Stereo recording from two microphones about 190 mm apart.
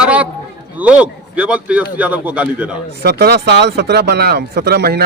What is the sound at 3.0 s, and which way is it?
Speech, 55° right (ahead or behind).